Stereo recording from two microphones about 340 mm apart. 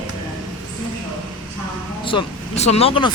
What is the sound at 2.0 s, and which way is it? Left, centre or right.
Speech, centre.